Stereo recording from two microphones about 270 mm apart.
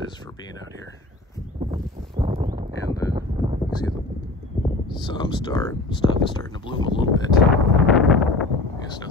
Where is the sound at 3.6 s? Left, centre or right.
Centre.